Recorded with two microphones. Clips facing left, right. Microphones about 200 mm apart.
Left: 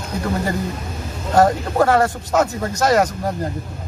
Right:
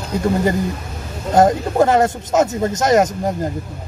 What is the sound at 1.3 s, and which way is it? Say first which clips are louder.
Speech: right 2 dB; 20° right (ahead or behind).